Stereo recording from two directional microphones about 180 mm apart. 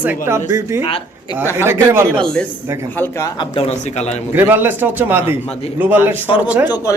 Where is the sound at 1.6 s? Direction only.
15° right (ahead or behind).